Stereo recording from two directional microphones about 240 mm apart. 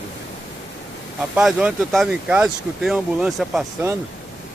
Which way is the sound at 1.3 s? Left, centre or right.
Centre.